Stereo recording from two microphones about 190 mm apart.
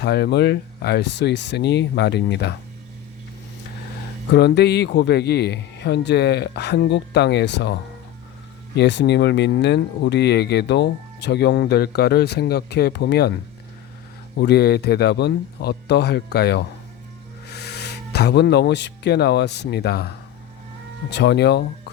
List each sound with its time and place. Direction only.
0.0 s speech: 60° left (ahead or behind)
4.3 s speech: 60° left (ahead or behind)
14.3 s speech: 60° left (ahead or behind)
21.1 s speech: 65° left (ahead or behind)